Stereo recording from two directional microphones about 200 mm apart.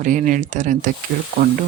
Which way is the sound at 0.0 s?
40° right (ahead or behind).